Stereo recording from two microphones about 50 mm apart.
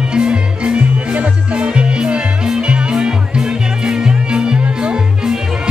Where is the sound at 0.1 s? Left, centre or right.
Centre.